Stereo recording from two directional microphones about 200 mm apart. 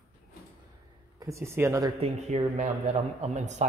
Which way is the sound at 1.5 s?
15° right (ahead or behind).